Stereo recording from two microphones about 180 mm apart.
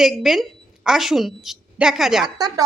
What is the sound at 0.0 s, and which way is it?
A woman's voice, centre (ahead or behind).